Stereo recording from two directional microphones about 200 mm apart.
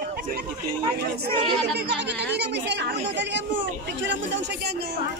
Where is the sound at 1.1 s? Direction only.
55° right (ahead or behind).